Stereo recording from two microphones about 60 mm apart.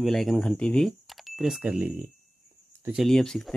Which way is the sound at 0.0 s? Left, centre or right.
Centre.